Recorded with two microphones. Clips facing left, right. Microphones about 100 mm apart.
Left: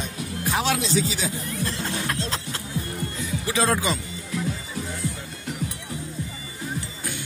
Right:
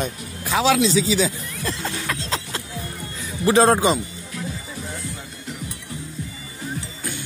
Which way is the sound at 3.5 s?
40° right (ahead or behind).